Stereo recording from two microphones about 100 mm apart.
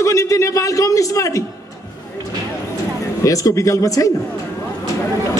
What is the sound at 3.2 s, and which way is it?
Speech, 35° left (ahead or behind).